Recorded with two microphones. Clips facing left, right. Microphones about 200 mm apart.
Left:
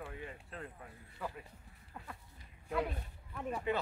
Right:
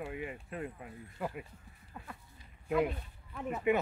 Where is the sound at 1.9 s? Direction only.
Centre (ahead or behind).